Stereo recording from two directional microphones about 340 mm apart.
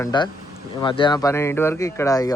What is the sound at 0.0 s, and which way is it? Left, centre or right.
Speech, centre.